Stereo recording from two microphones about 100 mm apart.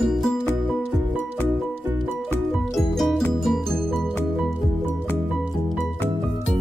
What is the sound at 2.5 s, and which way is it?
Music, centre (ahead or behind).